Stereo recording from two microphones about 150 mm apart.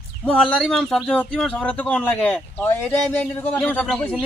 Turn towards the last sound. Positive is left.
turn(degrees=5)  # may be behind; listen again after turning